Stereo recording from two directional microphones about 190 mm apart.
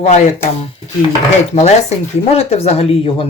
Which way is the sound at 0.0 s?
40° left (ahead or behind).